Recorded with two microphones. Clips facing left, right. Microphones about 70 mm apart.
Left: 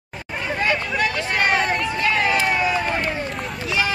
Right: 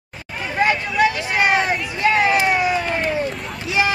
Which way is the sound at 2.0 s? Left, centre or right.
Centre.